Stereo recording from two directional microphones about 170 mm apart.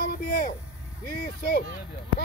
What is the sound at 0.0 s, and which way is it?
Speech, 60° left (ahead or behind).